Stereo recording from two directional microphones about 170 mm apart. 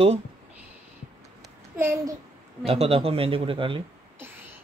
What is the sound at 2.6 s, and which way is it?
A man's voice, 35° right (ahead or behind).